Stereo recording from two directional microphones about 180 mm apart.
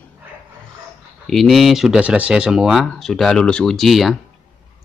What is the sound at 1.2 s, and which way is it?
Speech, centre (ahead or behind).